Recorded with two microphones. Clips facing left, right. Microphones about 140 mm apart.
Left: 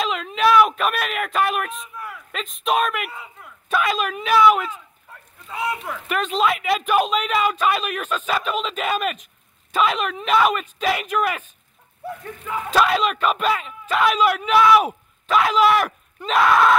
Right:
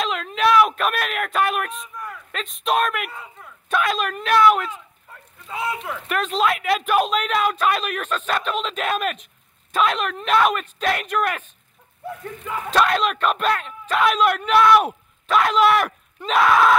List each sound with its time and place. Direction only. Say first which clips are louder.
0.0 s speech: left 1 dB; centre (ahead or behind)